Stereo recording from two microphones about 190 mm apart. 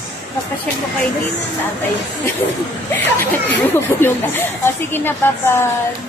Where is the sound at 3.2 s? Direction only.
10° left (ahead or behind).